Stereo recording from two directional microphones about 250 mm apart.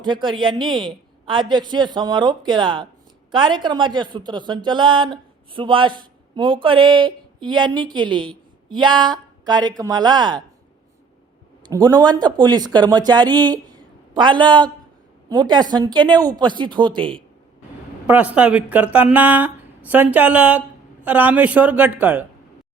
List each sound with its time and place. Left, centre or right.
0.0 s a woman's voice: centre
11.7 s speech: centre
18.0 s speech: centre